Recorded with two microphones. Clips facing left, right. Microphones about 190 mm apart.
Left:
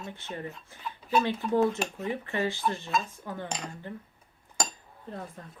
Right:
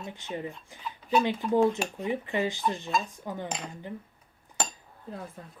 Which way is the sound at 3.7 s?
15° right (ahead or behind).